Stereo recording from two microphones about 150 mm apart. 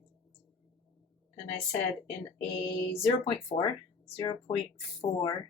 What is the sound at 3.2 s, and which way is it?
Speech, 40° left (ahead or behind).